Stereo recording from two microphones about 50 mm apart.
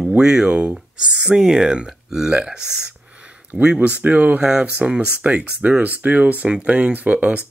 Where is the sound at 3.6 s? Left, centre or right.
Right.